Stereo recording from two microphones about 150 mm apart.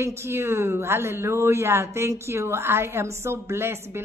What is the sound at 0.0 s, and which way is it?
Speech, 15° right (ahead or behind).